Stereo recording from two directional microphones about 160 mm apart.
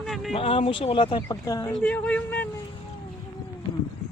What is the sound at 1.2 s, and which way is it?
Speech, 20° left (ahead or behind).